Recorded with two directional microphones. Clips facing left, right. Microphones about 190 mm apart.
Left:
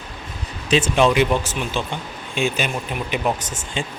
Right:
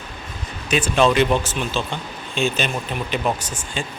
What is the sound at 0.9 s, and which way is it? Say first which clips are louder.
Speech: right 2 dB; 15° left (ahead or behind).